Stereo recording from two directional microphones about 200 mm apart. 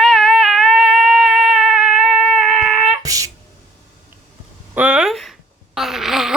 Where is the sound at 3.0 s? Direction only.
15° right (ahead or behind).